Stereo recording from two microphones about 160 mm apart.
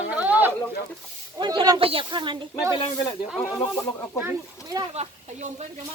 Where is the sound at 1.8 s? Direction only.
35° right (ahead or behind).